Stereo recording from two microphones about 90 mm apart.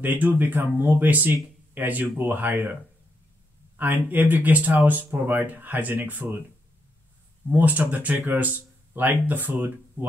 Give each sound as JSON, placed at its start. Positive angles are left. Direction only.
{"t": 0.0, "sound": "speech", "side_deg": -20}
{"t": 3.7, "sound": "speech", "side_deg": -20}
{"t": 7.5, "sound": "speech", "side_deg": -20}